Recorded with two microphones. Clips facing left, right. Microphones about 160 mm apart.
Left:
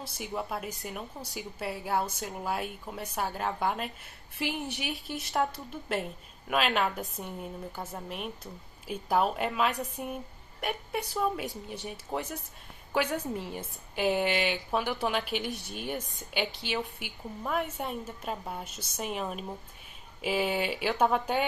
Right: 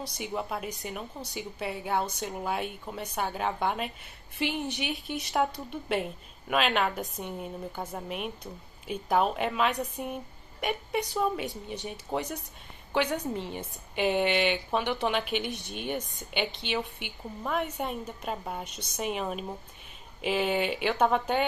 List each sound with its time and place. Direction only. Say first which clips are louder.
0.0 s a woman's voice: right 2 dB; 5° left (ahead or behind)